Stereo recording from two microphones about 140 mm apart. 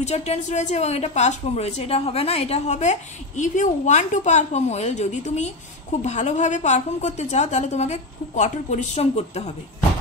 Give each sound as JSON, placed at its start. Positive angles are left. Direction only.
{"t": 0.0, "sound": "a woman's voice", "side_deg": 50}